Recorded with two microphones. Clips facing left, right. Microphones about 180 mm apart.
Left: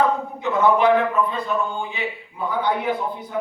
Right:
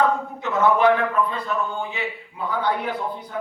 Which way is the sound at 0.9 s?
20° left (ahead or behind).